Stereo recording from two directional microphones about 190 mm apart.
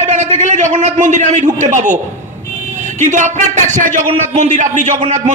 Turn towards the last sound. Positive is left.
turn(degrees=-40)  # may be behind; listen again after turning